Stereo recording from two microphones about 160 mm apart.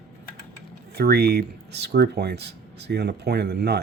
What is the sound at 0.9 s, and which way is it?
Speech, 85° right.